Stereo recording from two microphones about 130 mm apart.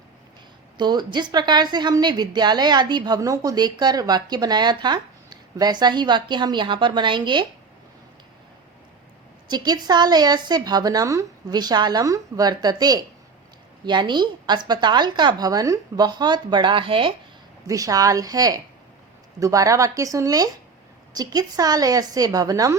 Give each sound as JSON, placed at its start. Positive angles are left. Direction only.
{"t": 0.8, "sound": "a woman's voice", "side_deg": -35}
{"t": 9.5, "sound": "a woman's voice", "side_deg": -35}
{"t": 17.7, "sound": "a woman's voice", "side_deg": -25}